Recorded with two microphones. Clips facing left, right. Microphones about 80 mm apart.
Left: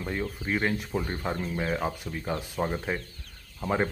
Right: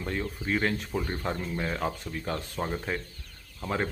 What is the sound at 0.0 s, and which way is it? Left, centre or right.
Speech, centre.